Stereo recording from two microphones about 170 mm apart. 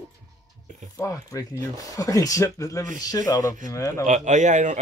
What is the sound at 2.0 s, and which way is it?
Speech, 20° left (ahead or behind).